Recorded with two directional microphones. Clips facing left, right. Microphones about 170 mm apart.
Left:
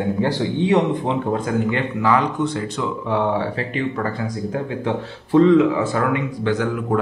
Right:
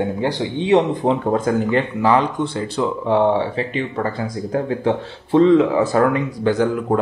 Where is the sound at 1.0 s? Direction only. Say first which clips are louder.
Right 4 dB; 40° right (ahead or behind).